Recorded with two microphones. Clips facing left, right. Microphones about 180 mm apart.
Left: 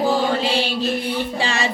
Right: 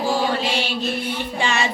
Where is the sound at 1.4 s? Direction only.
35° left (ahead or behind).